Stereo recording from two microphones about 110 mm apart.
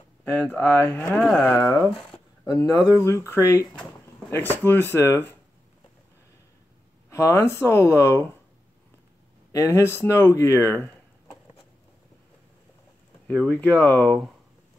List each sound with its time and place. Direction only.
0.2 s speech: 15° left (ahead or behind)
2.6 s speech: 35° left (ahead or behind)
7.1 s speech: 25° left (ahead or behind)
9.5 s speech: 25° left (ahead or behind)
13.3 s speech: 10° left (ahead or behind)